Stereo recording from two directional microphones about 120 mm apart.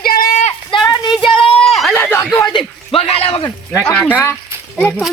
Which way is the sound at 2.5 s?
50° left (ahead or behind).